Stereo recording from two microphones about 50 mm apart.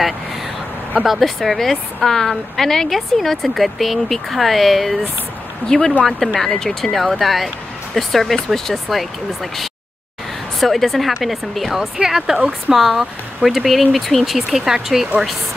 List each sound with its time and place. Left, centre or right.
1.0 s a woman's voice: centre
5.7 s speech: centre
6.0 s a woman's voice: centre
12.4 s speech: right
12.7 s a woman's voice: centre